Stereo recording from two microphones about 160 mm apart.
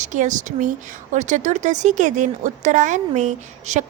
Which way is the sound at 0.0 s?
50° right (ahead or behind).